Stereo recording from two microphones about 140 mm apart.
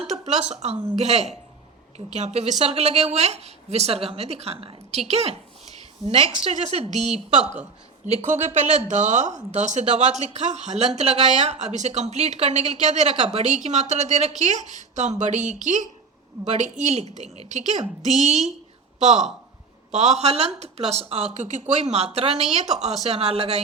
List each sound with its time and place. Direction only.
0.0 s a woman's voice: 55° right (ahead or behind)